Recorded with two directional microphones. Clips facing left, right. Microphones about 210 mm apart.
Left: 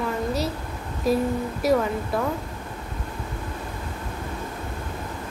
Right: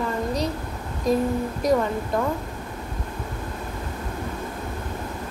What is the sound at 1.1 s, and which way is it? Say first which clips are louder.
Speech: right 1 dB; 5° left (ahead or behind).